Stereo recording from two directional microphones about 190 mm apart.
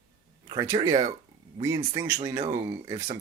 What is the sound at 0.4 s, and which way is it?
Speech, 20° right (ahead or behind).